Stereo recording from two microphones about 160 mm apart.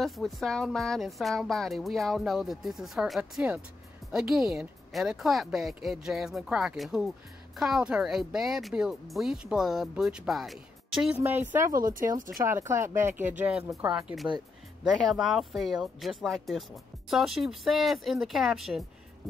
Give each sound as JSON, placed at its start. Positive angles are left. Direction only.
{"t": 0.0, "sound": "speech", "side_deg": 0}